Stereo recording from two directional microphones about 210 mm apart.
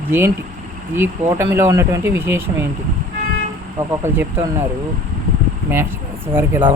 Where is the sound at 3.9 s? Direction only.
10° right (ahead or behind).